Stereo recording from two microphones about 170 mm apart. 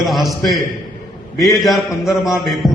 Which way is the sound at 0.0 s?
Centre (ahead or behind).